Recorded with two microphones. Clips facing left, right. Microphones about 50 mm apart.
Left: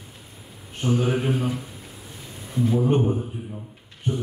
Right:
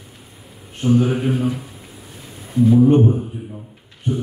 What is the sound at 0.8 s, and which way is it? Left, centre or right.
Speech, centre.